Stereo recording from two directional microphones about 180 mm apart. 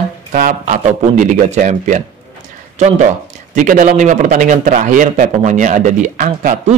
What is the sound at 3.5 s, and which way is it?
A man's voice, 45° right (ahead or behind).